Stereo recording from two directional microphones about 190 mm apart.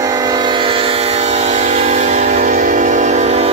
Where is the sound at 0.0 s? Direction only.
20° right (ahead or behind).